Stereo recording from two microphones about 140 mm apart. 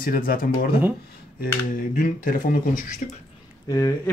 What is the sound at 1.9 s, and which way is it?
Speech, 75° left (ahead or behind).